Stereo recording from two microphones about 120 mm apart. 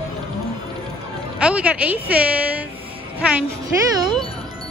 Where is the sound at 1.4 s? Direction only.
10° right (ahead or behind).